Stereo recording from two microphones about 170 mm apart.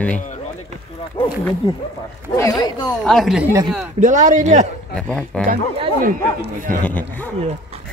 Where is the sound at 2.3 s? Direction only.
20° left (ahead or behind).